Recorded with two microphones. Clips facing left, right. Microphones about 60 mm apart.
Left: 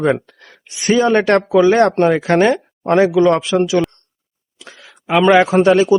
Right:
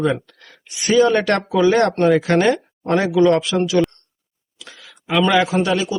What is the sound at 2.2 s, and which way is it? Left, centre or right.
Speech, left.